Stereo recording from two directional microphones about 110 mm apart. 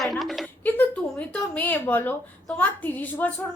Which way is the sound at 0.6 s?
15° left (ahead or behind).